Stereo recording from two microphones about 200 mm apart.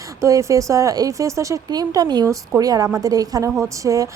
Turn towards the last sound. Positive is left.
turn(degrees=-15)  # may be behind; listen again after turning